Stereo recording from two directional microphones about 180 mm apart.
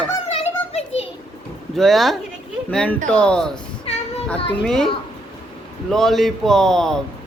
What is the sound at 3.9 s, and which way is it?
Child singing, 35° left (ahead or behind).